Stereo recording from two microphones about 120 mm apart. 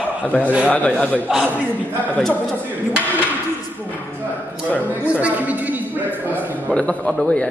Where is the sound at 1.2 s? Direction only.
10° right (ahead or behind).